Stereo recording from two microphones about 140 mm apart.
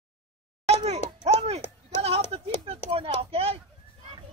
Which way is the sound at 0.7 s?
50° right (ahead or behind).